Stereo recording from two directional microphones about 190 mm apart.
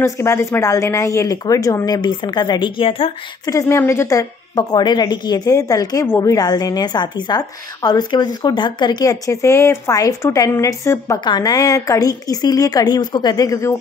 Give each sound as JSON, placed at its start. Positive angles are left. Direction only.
{"t": 0.0, "sound": "a woman's voice", "side_deg": 15}